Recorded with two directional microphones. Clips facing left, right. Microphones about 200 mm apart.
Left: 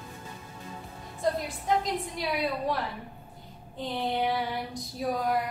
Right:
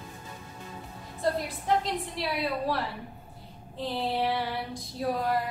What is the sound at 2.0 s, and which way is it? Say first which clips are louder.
Female singing: left 1 dB; centre (ahead or behind).